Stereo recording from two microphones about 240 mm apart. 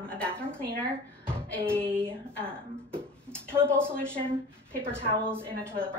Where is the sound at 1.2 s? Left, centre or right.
Centre.